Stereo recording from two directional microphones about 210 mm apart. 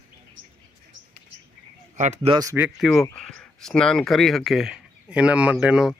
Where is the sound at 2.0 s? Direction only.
35° right (ahead or behind).